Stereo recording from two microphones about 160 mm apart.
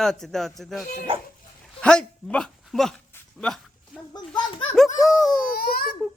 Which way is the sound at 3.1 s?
5° left (ahead or behind).